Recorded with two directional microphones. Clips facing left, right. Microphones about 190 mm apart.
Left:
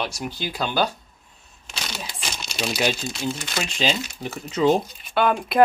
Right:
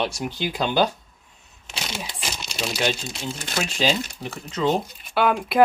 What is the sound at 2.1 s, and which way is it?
Crumpling, 5° left (ahead or behind).